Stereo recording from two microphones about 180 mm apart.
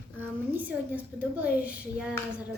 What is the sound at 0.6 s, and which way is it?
A woman's voice, 10° right (ahead or behind).